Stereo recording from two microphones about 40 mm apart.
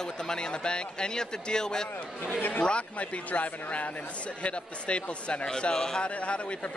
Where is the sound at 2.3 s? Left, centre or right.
Left.